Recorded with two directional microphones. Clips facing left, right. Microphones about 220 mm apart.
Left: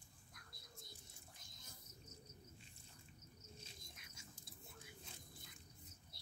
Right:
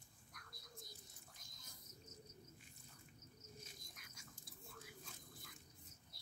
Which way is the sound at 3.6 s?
25° left (ahead or behind).